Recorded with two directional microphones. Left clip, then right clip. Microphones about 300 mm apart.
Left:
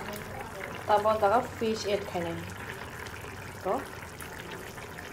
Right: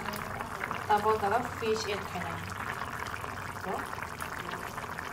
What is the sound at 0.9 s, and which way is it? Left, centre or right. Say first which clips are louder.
Speech: left 3 dB; left.